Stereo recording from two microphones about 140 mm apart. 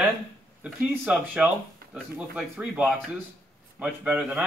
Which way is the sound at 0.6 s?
10° right (ahead or behind).